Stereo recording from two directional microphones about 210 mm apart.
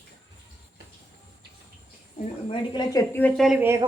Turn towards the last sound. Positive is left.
turn(degrees=0)  # may be behind; listen again after turning